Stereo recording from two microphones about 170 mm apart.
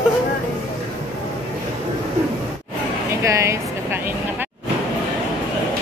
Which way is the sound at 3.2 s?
15° right (ahead or behind).